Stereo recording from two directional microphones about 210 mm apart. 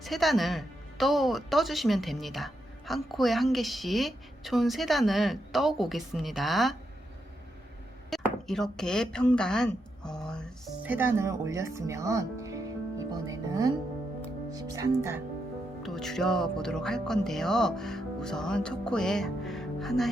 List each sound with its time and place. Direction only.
0.0 s speech: centre (ahead or behind)
8.1 s speech: centre (ahead or behind)
10.8 s speech: 10° right (ahead or behind)
15.8 s speech: centre (ahead or behind)